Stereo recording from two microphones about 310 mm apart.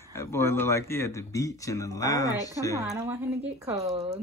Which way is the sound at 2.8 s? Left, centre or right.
Centre.